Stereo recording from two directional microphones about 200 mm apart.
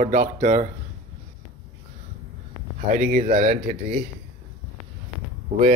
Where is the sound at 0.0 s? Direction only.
40° right (ahead or behind).